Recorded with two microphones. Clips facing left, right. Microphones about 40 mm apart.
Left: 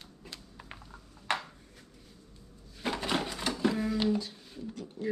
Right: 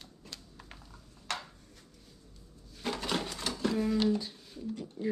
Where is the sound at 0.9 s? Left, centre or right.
Left.